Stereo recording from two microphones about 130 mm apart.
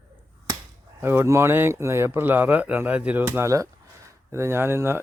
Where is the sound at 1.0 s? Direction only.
20° right (ahead or behind).